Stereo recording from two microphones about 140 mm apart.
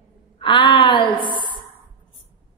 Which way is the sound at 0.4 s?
35° left (ahead or behind).